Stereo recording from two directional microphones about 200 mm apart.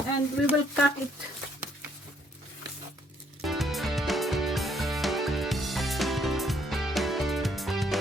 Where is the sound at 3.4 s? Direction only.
Centre (ahead or behind).